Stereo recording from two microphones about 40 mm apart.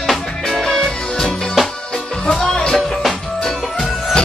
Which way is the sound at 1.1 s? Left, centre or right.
Centre.